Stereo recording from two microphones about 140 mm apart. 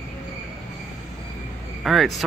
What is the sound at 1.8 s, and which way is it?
Vehicle, centre (ahead or behind).